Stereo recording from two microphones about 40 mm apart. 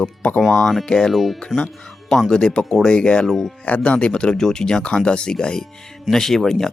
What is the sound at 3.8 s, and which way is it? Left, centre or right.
Speech, left.